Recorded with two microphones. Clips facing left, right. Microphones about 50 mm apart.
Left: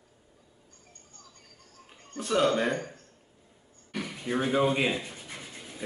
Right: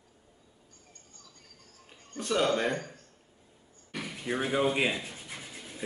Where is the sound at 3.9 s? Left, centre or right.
Centre.